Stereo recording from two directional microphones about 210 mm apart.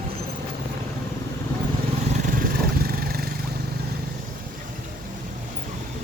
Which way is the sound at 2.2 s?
40° right (ahead or behind).